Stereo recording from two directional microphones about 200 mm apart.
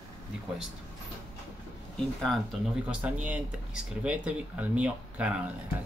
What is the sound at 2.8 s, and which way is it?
Speech, 10° right (ahead or behind).